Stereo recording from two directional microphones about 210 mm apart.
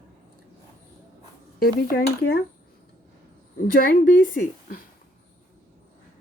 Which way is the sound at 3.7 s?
40° left (ahead or behind).